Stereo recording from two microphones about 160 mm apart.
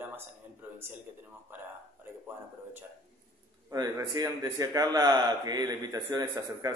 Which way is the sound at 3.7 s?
25° right (ahead or behind).